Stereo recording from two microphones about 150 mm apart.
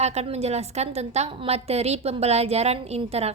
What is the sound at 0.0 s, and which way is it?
A woman's voice, 45° right (ahead or behind).